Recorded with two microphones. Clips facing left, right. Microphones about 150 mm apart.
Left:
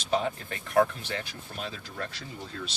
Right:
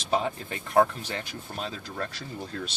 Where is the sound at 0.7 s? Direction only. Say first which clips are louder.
Right 1 dB; 35° right (ahead or behind).